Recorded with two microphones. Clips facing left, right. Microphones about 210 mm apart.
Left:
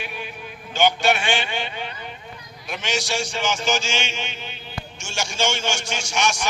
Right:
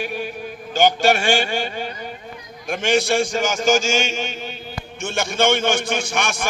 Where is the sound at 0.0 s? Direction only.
45° right (ahead or behind).